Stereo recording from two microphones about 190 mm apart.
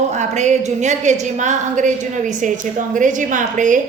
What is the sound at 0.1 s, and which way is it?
A woman's voice, 40° right (ahead or behind).